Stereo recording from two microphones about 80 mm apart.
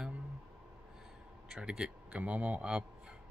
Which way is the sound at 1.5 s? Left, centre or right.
Centre.